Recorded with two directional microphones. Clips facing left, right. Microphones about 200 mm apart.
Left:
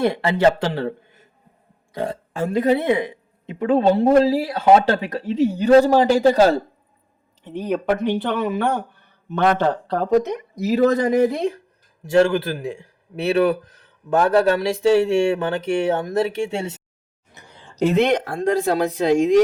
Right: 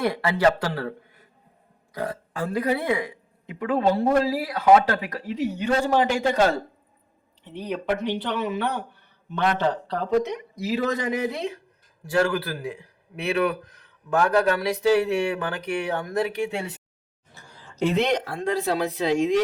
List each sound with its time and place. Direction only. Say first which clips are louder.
0.0 s a man's voice: left 4 dB; 25° left (ahead or behind)
7.4 s speech: left 6 dB; 50° left (ahead or behind)
12.0 s a man's voice: left 6 dB; 25° left (ahead or behind)
17.3 s a sound: left 2 dB; 20° left (ahead or behind)
17.7 s speech: left 5 dB; 45° left (ahead or behind)